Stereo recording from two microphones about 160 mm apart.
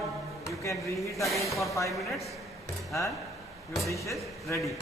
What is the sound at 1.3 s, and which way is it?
Speech, centre (ahead or behind).